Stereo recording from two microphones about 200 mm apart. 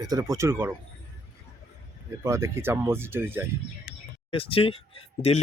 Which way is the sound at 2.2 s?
15° right (ahead or behind).